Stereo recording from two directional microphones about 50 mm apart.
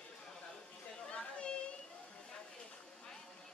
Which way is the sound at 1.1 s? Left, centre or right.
Left.